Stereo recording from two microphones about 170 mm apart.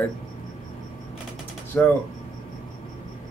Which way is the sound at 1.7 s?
10° left (ahead or behind).